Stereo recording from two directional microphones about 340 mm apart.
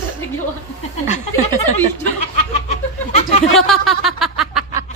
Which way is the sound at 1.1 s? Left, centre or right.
Centre.